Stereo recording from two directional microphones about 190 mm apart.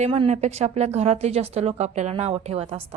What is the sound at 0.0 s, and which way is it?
Speech, 35° right (ahead or behind).